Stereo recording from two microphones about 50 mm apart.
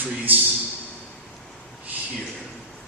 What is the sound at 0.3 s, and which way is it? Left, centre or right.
Speech, right.